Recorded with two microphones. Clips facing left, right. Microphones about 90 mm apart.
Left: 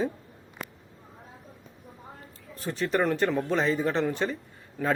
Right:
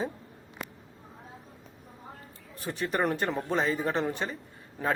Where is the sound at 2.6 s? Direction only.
15° right (ahead or behind).